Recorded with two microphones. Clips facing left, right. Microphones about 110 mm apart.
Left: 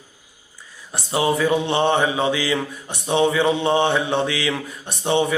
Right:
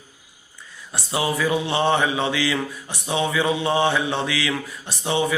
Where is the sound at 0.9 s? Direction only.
25° left (ahead or behind).